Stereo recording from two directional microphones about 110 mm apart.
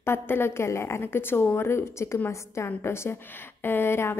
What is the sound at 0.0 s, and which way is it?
A woman's voice, 20° left (ahead or behind).